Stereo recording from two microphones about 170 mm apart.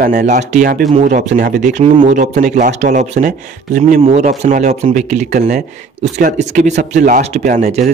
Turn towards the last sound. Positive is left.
turn(degrees=-40)  # may be behind; listen again after turning